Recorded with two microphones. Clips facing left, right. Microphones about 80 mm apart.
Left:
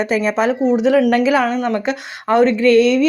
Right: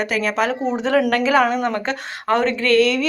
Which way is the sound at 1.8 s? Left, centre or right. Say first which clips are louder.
Left 3 dB; centre.